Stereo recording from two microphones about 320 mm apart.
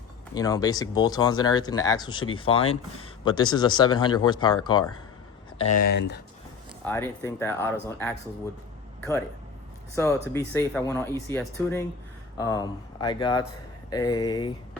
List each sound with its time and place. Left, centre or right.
0.3 s speech: centre
5.8 s speech: left
6.8 s speech: centre
9.9 s speech: centre